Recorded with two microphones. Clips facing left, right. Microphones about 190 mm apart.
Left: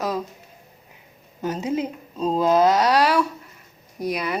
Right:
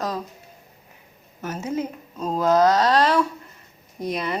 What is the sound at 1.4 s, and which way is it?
A woman's voice, 15° left (ahead or behind).